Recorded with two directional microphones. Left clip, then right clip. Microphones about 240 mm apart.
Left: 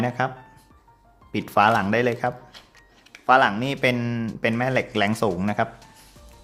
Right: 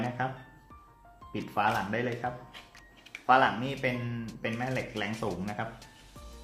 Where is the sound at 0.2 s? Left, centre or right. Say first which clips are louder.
Left 8 dB; left.